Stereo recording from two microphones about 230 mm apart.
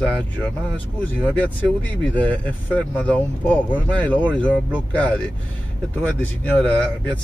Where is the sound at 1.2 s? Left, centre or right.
Centre.